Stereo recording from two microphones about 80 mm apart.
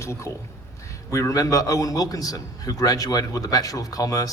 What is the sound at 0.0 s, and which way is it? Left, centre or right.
A man's voice, left.